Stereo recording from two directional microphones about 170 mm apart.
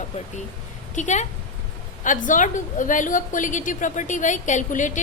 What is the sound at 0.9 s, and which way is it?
A woman's voice, 45° left (ahead or behind).